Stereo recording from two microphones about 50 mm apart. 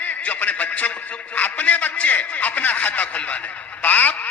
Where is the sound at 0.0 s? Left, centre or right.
Left.